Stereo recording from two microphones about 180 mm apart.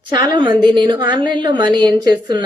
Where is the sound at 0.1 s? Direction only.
25° right (ahead or behind).